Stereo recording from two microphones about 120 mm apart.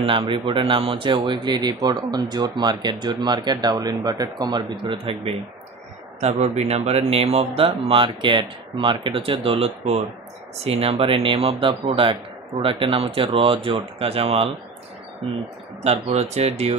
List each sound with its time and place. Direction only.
0.3 s speech: 45° right (ahead or behind)
6.2 s speech: 70° right (ahead or behind); by 14.5 s 50° right (ahead or behind)
15.8 s speech: 60° right (ahead or behind)